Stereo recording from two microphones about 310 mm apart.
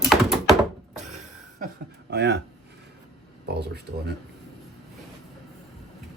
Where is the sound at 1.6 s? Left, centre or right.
Right.